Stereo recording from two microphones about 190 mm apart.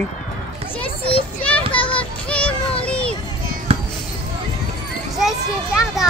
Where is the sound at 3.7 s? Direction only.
35° right (ahead or behind).